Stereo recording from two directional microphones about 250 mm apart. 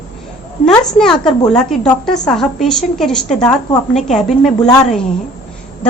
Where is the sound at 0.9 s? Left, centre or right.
Centre.